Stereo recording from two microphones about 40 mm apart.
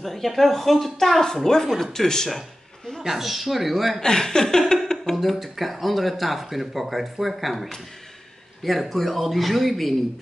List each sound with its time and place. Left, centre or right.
0.0 s a woman's voice: centre
3.0 s speech: centre
4.0 s a woman's voice: centre
5.1 s speech: centre